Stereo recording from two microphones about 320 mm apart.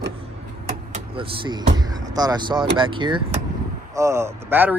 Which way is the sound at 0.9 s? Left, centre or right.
Centre.